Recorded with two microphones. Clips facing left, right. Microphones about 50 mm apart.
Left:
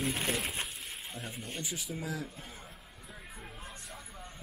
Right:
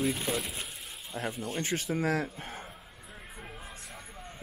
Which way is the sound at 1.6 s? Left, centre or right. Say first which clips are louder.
Right 10 dB; right.